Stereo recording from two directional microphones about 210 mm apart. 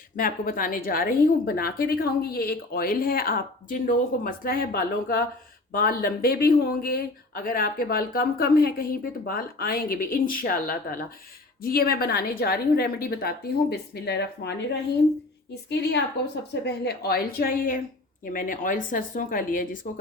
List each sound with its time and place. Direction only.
0.2 s speech: 40° left (ahead or behind)